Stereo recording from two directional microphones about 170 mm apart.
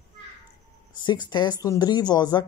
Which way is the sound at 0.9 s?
25° left (ahead or behind).